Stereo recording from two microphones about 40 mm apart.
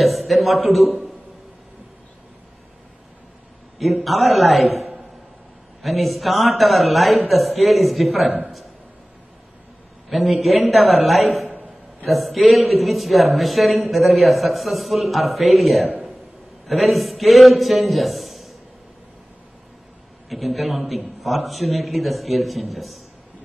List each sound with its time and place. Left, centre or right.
0.0 s a man's voice: centre
3.7 s a man's voice: centre
10.0 s a man's voice: centre
11.5 s a sound: right
12.1 s a man's voice: centre
20.2 s a man's voice: centre